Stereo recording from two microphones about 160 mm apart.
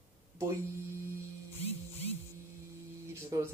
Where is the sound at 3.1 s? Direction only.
15° right (ahead or behind).